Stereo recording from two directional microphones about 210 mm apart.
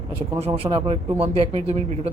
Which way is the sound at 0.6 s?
25° right (ahead or behind).